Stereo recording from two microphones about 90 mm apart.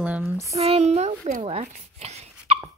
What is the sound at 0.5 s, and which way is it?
Speech, 90° right.